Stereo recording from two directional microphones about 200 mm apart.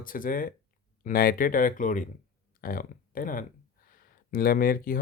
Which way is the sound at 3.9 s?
45° left (ahead or behind).